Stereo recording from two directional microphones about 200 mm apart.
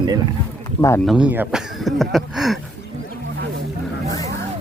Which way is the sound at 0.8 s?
15° left (ahead or behind).